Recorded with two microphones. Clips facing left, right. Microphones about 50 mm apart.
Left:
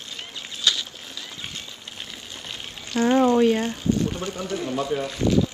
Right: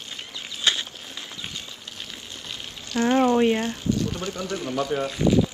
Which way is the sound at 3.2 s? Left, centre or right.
Right.